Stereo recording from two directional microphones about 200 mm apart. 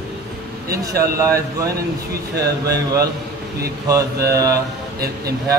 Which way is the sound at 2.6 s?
15° right (ahead or behind).